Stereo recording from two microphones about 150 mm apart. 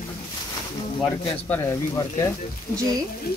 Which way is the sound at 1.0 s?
10° left (ahead or behind).